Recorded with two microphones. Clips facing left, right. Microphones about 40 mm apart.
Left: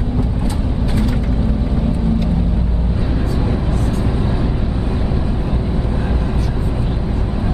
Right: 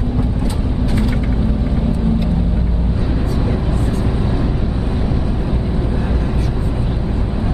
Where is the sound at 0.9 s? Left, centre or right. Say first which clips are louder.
Even; centre.